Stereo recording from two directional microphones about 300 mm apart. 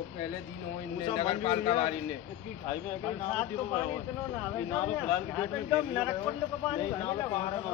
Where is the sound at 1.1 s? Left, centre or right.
Centre.